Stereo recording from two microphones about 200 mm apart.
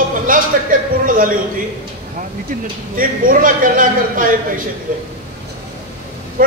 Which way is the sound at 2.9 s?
45° right (ahead or behind).